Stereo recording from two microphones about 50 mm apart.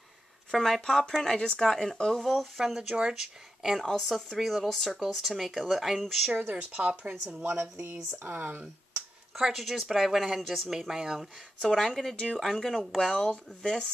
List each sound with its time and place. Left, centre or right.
0.5 s speech: centre
2.2 s speech: centre
3.8 s speech: centre
6.7 s speech: right
8.2 s speech: right
9.4 s speech: centre
11.7 s speech: centre
13.1 s speech: left